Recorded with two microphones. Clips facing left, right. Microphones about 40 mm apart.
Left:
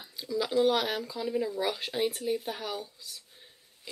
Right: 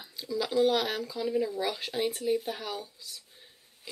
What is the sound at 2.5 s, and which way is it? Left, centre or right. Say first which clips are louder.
Speech: even; centre.